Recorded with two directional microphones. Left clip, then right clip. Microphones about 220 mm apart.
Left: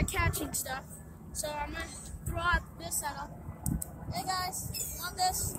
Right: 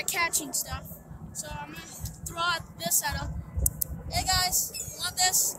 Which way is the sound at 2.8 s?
45° right (ahead or behind).